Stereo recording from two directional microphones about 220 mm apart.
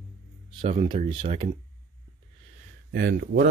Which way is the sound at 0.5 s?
25° right (ahead or behind).